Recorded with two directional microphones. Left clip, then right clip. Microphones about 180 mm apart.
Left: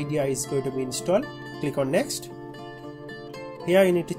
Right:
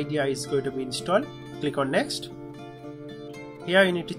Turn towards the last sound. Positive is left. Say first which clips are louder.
# left 1 dB
turn(degrees=30)  # may be behind; listen again after turning